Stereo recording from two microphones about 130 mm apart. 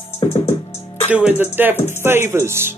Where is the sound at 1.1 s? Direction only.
10° right (ahead or behind).